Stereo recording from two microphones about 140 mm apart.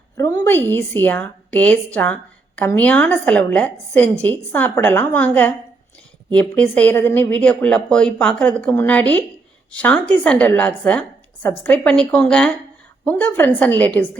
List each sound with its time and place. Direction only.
0.2 s speech: 20° left (ahead or behind)